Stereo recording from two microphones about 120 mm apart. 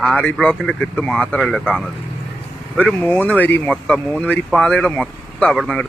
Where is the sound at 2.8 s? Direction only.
15° left (ahead or behind).